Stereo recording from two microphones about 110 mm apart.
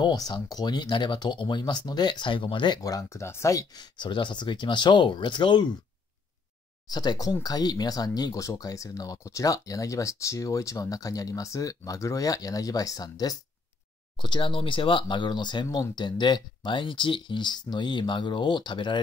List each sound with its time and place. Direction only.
0.0 s speech: 40° left (ahead or behind)
2.8 s speech: 30° left (ahead or behind)
6.9 s speech: 40° left (ahead or behind)